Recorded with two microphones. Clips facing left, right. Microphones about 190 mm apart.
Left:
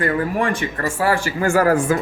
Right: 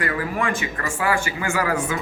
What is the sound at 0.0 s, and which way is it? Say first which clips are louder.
Speech: left 5 dB; 35° left (ahead or behind).